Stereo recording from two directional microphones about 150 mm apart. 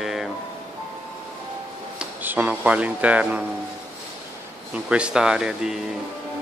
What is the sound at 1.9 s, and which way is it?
Speech, 10° right (ahead or behind).